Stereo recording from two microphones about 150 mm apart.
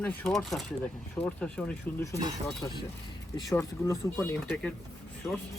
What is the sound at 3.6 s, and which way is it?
Speech, 15° left (ahead or behind).